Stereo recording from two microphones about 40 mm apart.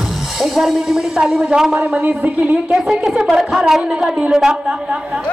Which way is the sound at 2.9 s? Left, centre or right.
Centre.